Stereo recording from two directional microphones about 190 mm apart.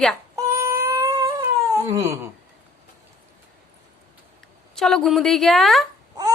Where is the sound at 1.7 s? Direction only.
15° right (ahead or behind).